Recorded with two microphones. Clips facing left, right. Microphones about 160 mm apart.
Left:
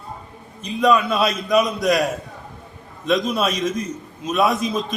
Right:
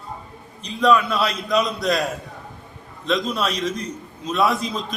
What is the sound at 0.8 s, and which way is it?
A man's voice, 15° left (ahead or behind).